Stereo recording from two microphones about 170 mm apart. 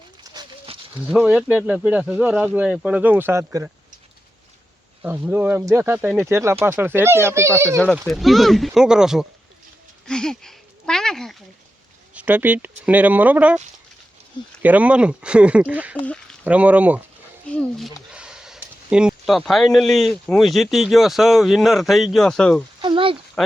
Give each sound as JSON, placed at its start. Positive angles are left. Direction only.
{"t": 0.3, "sound": "a sound", "side_deg": -30}
{"t": 1.1, "sound": "speech", "side_deg": -5}
{"t": 5.0, "sound": "speech", "side_deg": -10}
{"t": 8.0, "sound": "speech", "side_deg": 0}
{"t": 12.1, "sound": "speech", "side_deg": -10}
{"t": 14.6, "sound": "speech", "side_deg": -10}
{"t": 17.5, "sound": "speech", "side_deg": 5}
{"t": 22.8, "sound": "a sound", "side_deg": -30}